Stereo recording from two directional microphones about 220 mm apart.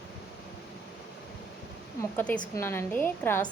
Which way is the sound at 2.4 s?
10° left (ahead or behind).